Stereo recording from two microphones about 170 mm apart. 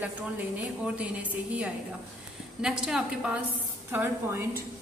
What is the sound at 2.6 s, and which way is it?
A woman's voice, 5° right (ahead or behind).